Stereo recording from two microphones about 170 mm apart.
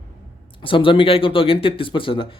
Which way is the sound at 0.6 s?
30° left (ahead or behind).